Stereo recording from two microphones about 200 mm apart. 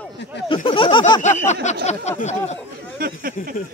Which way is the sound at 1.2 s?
35° left (ahead or behind).